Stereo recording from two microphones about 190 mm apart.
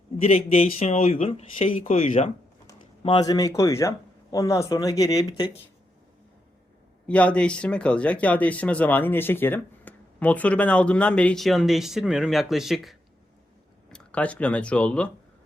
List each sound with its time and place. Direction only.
0.2 s speech: 35° left (ahead or behind)
7.1 s speech: 5° left (ahead or behind)